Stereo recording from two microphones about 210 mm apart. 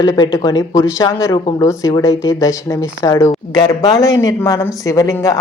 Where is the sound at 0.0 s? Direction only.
20° left (ahead or behind).